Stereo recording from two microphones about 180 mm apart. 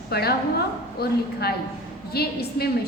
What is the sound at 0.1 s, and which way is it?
A woman's voice, 60° left (ahead or behind).